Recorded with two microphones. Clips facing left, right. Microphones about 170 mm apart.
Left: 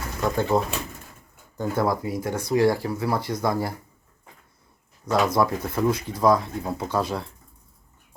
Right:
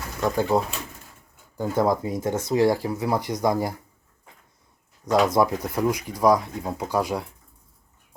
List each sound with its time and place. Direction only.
0.2 s speech: 10° right (ahead or behind)
1.6 s speech: 15° right (ahead or behind)
5.0 s speech: 20° right (ahead or behind)